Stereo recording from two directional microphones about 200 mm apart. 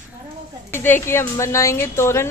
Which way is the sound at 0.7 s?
10° left (ahead or behind).